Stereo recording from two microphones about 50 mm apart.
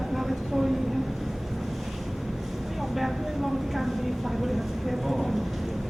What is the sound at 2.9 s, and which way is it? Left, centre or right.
Vehicle, centre.